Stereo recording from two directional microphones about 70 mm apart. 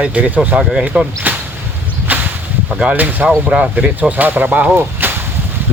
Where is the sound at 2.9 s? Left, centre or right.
Right.